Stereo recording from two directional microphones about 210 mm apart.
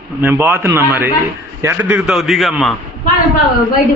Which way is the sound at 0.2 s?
10° right (ahead or behind).